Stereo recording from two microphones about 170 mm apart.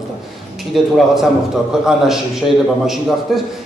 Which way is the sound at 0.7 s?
Centre (ahead or behind).